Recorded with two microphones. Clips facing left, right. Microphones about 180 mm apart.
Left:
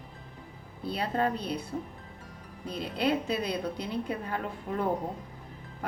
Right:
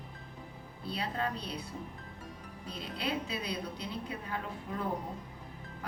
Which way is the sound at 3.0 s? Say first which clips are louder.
Left 8 dB; 45° left (ahead or behind).